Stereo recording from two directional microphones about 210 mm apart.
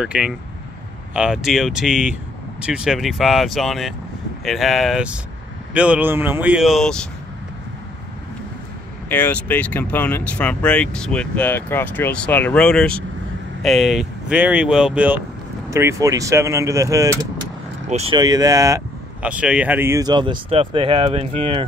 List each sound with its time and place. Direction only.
0.0 s speech: 5° right (ahead or behind)
9.1 s speech: 10° left (ahead or behind); by 17.3 s 15° right (ahead or behind)
17.8 s speech: 30° right (ahead or behind)
19.2 s speech: 5° right (ahead or behind); by 21.6 s 25° right (ahead or behind)